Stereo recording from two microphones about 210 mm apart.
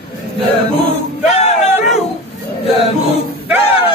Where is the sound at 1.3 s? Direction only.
30° left (ahead or behind).